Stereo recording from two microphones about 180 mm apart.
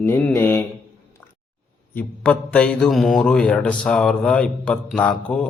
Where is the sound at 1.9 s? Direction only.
5° left (ahead or behind).